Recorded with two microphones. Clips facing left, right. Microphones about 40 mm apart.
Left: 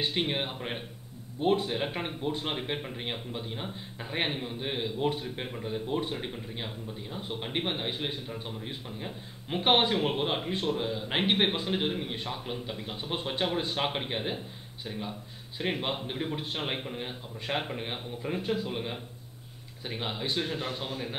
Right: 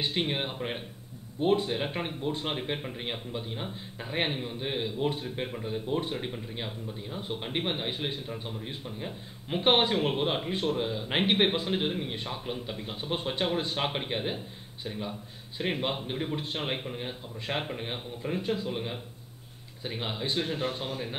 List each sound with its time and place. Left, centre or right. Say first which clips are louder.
0.0 s speech: even; centre
20.4 s speech: right 2 dB; right